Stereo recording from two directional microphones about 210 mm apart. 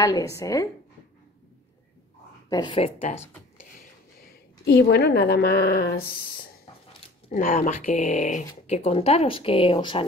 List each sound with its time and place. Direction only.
0.0 s a woman's voice: 15° left (ahead or behind)
2.5 s speech: 25° left (ahead or behind)
4.6 s a woman's voice: 55° left (ahead or behind)
6.9 s speech: 35° left (ahead or behind)